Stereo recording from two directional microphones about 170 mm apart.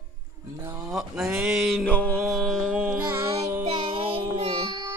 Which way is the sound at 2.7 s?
Centre (ahead or behind).